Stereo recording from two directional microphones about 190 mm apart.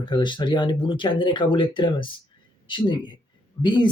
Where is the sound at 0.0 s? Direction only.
25° left (ahead or behind).